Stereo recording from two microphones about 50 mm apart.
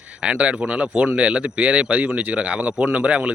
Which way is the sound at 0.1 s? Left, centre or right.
Right.